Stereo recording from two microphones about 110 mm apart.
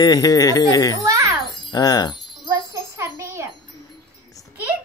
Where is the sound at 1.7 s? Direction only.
35° left (ahead or behind).